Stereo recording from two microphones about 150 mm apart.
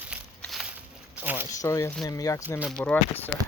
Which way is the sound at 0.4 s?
Centre (ahead or behind).